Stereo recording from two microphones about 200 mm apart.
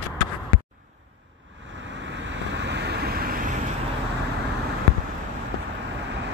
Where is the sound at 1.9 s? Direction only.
65° right (ahead or behind); by 3.5 s 45° right (ahead or behind).